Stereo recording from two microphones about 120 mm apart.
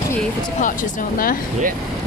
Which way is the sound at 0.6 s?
90° left.